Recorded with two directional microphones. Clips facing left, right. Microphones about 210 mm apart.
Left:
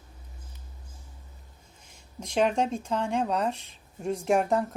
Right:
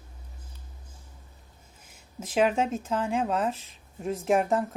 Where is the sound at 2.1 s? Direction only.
5° right (ahead or behind).